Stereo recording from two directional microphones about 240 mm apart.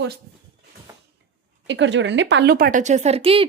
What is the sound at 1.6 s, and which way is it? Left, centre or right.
A woman's voice, right.